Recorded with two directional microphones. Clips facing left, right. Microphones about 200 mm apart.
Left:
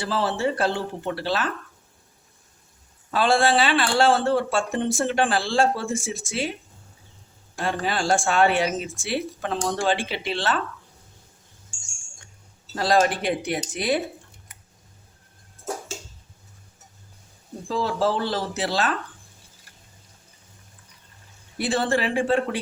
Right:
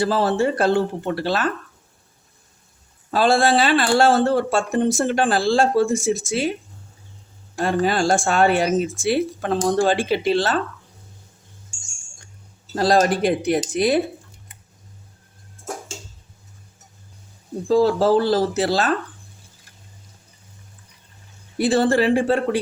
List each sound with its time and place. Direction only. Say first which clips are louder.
0.0 s a woman's voice: right 5 dB; 45° right (ahead or behind)
3.1 s speech: right 3 dB; 40° right (ahead or behind)
7.6 s a woman's voice: right 6 dB; 45° right (ahead or behind)
12.7 s speech: right 3 dB; 40° right (ahead or behind)
17.7 s speech: right 8 dB; 40° right (ahead or behind)
21.6 s speech: right 6 dB; 40° right (ahead or behind)